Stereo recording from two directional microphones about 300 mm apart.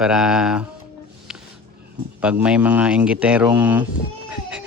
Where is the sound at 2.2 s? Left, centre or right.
Centre.